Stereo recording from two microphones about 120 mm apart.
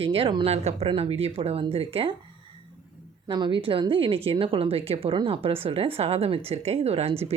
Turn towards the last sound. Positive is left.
turn(degrees=-60)  # may be behind; listen again after turning